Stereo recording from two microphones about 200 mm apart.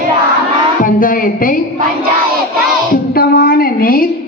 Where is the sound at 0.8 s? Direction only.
45° left (ahead or behind).